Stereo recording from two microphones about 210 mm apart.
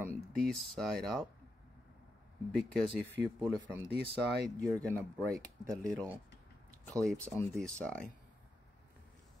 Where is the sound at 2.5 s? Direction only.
5° left (ahead or behind).